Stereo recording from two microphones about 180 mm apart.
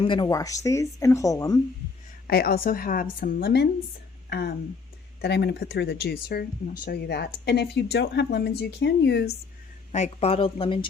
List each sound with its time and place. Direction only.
0.0 s speech: 25° left (ahead or behind)
2.2 s speech: 55° left (ahead or behind)
9.9 s a woman's voice: 35° left (ahead or behind)